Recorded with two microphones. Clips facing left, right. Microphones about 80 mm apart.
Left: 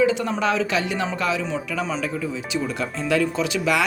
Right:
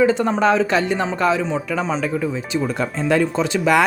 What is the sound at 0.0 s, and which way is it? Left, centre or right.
Speech, right.